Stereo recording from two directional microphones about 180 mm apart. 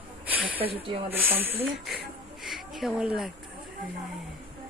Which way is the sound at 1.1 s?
10° right (ahead or behind).